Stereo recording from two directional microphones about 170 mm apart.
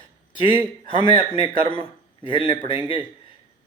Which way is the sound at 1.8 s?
30° left (ahead or behind).